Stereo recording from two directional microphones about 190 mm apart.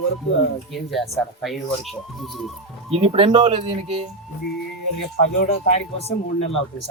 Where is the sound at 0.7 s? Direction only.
Centre (ahead or behind).